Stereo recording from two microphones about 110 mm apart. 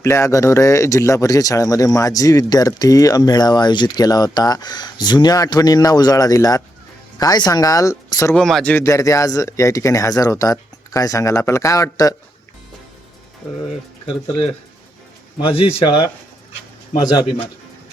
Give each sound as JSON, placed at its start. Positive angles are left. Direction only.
{"t": 0.0, "sound": "speech", "side_deg": 25}
{"t": 8.4, "sound": "speech", "side_deg": 5}
{"t": 8.7, "sound": "speech", "side_deg": 25}
{"t": 15.4, "sound": "a man's voice", "side_deg": 50}
{"t": 17.2, "sound": "a man's voice", "side_deg": 55}